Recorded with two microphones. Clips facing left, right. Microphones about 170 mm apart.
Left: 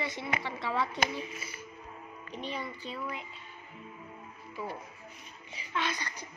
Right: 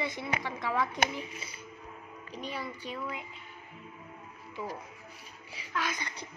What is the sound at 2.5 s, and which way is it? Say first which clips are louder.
Music: even; 5° right (ahead or behind).